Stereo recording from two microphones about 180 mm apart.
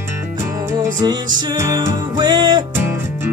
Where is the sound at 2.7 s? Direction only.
10° right (ahead or behind).